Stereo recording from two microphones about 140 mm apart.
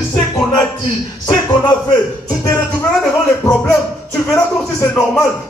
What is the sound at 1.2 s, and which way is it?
A man's voice, 30° left (ahead or behind).